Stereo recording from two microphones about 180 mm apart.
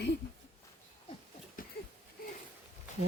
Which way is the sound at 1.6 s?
50° left (ahead or behind).